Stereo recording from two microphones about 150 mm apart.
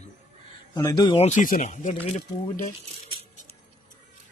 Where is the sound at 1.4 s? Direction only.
60° left (ahead or behind).